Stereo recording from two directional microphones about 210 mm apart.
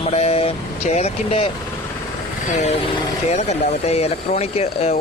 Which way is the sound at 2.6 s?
30° left (ahead or behind).